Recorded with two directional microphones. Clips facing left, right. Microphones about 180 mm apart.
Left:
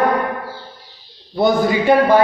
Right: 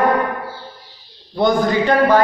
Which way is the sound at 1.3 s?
5° left (ahead or behind).